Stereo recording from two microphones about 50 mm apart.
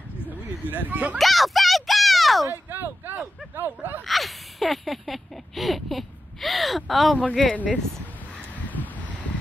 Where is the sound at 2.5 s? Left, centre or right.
Right.